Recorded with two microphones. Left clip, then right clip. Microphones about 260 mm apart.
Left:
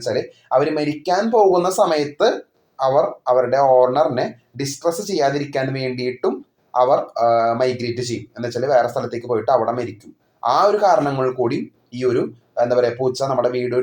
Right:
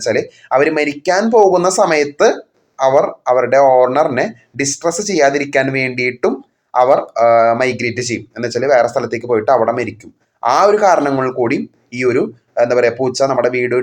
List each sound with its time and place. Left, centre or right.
0.0 s speech: right